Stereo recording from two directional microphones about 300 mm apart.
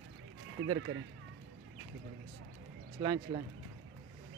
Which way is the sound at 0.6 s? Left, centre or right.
Right.